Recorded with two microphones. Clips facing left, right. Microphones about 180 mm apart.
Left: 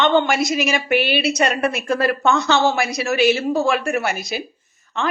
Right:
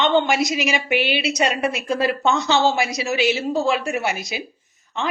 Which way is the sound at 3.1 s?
55° left (ahead or behind).